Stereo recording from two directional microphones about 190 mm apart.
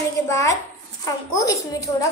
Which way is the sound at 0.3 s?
15° left (ahead or behind).